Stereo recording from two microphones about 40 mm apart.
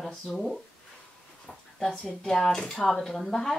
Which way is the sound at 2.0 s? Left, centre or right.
Centre.